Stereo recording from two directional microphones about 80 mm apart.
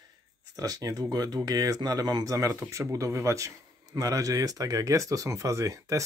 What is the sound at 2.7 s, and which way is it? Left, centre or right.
Speech, right.